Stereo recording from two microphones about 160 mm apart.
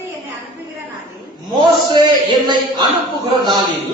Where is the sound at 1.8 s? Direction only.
30° right (ahead or behind).